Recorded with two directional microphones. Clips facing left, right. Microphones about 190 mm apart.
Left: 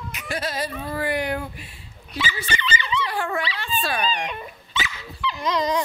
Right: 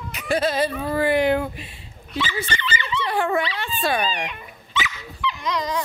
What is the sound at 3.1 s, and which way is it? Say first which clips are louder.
Speech: right 4 dB; 20° right (ahead or behind).